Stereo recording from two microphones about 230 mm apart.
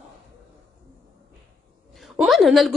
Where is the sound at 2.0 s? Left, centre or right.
Centre.